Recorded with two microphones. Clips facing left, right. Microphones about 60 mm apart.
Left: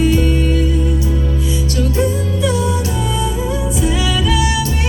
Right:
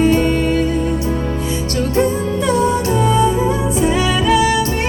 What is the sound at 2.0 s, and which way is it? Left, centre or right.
Music, right.